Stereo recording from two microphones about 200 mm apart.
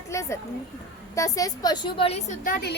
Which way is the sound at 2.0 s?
30° left (ahead or behind).